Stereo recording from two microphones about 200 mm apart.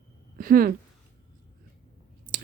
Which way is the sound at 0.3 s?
45° right (ahead or behind).